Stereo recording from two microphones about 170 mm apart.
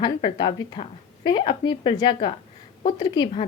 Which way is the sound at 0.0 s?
30° left (ahead or behind).